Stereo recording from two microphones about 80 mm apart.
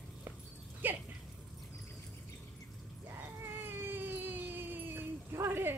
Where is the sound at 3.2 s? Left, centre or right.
Right.